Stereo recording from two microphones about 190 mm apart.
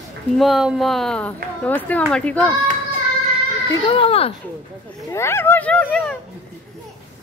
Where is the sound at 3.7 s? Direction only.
30° left (ahead or behind).